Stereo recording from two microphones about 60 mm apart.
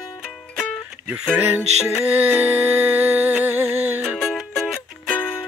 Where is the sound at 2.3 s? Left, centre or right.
Right.